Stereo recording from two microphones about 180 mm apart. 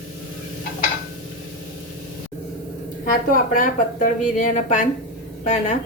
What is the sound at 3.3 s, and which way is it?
A woman's voice, 50° left (ahead or behind).